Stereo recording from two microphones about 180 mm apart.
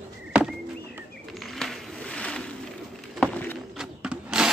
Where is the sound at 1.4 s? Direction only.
Centre (ahead or behind).